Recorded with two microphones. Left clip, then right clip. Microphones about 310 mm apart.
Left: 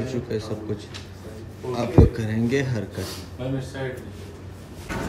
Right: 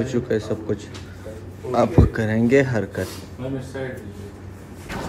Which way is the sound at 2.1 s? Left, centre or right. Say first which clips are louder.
Right 7 dB; centre.